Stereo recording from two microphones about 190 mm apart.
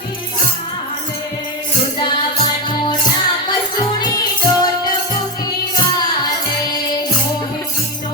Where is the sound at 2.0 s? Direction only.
25° left (ahead or behind).